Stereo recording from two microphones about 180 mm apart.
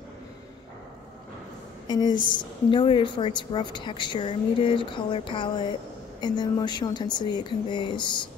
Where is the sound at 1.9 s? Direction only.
25° left (ahead or behind).